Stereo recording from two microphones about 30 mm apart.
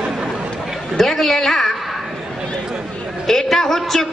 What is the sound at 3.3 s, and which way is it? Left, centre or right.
Speech, centre.